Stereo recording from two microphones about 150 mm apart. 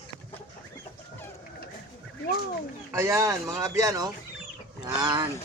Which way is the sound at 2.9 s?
20° right (ahead or behind).